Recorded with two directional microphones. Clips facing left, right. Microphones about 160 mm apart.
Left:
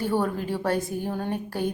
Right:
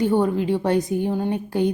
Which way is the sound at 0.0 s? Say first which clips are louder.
Right 6 dB; 20° right (ahead or behind).